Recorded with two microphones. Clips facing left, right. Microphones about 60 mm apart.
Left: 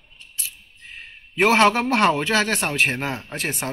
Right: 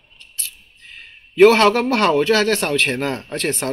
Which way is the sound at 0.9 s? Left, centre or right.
Left.